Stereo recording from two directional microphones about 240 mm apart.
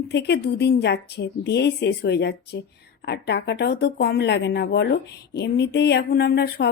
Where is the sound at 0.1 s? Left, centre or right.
Left.